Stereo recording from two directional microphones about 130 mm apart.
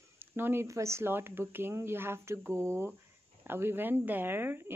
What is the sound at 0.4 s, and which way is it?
Speech, 20° right (ahead or behind).